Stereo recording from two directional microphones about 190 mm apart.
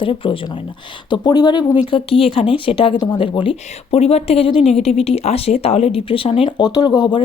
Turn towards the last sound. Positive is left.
turn(degrees=25)  # may be behind; listen again after turning